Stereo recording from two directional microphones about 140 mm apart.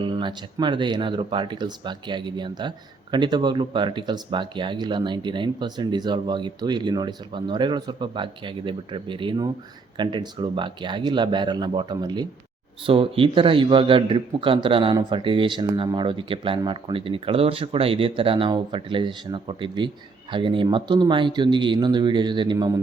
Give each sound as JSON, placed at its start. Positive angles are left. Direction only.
{"t": 0.0, "sound": "speech", "side_deg": -35}